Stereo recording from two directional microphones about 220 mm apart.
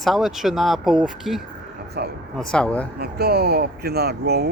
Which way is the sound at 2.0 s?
45° right (ahead or behind).